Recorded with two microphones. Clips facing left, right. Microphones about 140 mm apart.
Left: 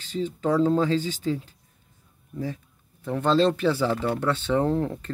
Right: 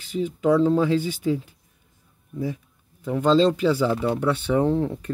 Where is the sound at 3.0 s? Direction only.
15° right (ahead or behind).